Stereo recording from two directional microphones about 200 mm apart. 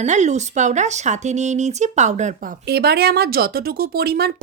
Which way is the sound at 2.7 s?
50° right (ahead or behind).